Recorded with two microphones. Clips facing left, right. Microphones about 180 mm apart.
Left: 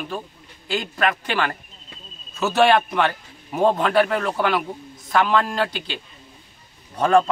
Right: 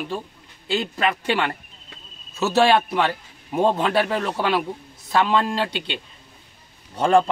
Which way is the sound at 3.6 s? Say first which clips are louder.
Left 2 dB; 25° right (ahead or behind).